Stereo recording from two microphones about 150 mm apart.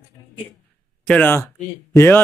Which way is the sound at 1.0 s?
10° left (ahead or behind).